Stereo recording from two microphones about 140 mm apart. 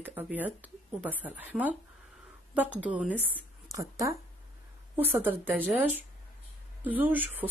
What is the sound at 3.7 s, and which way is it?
A woman's voice, 20° right (ahead or behind).